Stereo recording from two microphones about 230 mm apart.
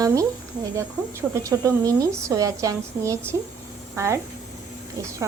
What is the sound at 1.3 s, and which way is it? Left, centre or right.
A woman's voice, centre.